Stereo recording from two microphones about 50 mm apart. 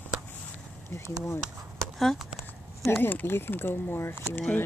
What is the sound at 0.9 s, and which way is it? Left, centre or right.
Speech, left.